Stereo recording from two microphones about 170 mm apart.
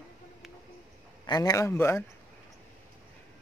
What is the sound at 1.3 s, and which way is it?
Speech, 20° left (ahead or behind).